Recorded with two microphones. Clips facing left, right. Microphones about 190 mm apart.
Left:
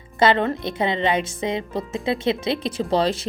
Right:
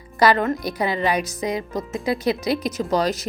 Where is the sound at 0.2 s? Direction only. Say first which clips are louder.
Even; 25° left (ahead or behind).